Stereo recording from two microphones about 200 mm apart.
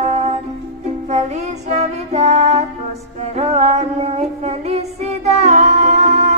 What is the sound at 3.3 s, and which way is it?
Female singing, 35° right (ahead or behind).